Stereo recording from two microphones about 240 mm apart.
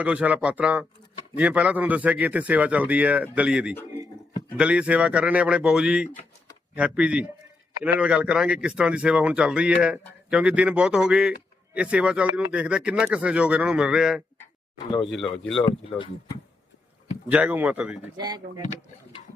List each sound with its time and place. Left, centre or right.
0.0 s speech: centre
17.2 s speech: centre
18.2 s speech: centre